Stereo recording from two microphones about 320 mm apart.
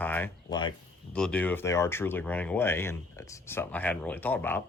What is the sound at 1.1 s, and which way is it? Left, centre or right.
Speech, centre.